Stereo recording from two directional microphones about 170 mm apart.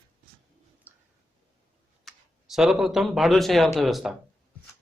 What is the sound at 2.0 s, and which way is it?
Speech, centre (ahead or behind).